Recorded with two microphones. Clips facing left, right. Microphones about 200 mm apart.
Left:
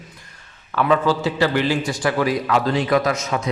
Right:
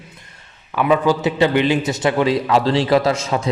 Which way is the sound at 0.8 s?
15° right (ahead or behind).